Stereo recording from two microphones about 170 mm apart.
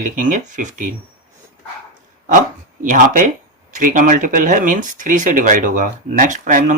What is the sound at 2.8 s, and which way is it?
Speech, 50° right (ahead or behind).